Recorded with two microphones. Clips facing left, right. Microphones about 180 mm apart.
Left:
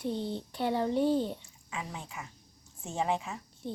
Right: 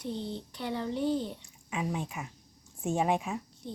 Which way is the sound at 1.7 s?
15° right (ahead or behind).